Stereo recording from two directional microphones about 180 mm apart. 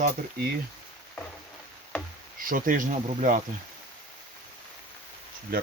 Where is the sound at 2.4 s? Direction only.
50° right (ahead or behind).